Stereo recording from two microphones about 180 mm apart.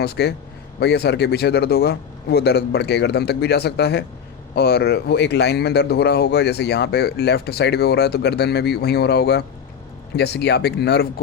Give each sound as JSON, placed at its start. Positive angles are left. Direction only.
{"t": 0.0, "sound": "speech", "side_deg": 65}